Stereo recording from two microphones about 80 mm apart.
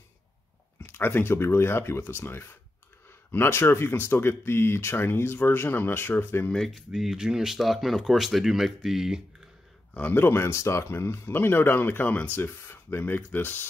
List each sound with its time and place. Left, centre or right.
0.7 s speech: left
6.5 s speech: centre
6.9 s speech: centre
9.9 s speech: left